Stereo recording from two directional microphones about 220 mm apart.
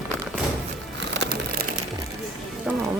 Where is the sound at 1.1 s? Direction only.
45° right (ahead or behind).